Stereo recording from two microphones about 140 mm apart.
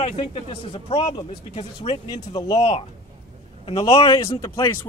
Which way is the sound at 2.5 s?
45° left (ahead or behind).